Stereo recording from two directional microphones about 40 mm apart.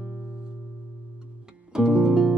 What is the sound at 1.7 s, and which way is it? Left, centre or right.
Music, centre.